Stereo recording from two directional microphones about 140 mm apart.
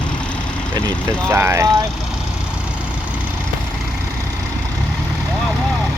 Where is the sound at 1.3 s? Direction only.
15° right (ahead or behind).